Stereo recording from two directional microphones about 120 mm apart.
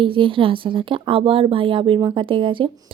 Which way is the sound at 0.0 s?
45° right (ahead or behind).